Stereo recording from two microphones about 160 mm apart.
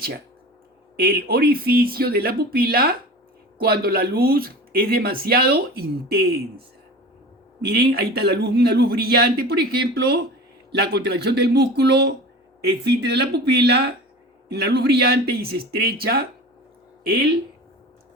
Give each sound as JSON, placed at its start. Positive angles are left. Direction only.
{"t": 0.9, "sound": "speech", "side_deg": -70}
{"t": 7.6, "sound": "a man's voice", "side_deg": -80}
{"t": 17.1, "sound": "speech", "side_deg": -90}